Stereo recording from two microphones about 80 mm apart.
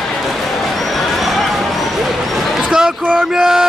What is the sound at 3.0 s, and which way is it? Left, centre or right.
Music, centre.